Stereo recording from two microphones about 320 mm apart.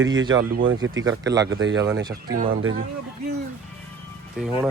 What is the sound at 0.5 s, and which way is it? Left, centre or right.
Speech, right.